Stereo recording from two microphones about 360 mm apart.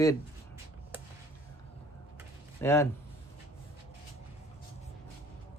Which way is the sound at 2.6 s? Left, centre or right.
Centre.